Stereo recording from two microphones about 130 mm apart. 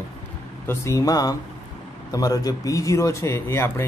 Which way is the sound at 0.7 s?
25° left (ahead or behind).